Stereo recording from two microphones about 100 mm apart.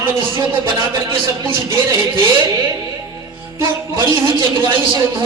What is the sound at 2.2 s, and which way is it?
Speech, 50° right (ahead or behind).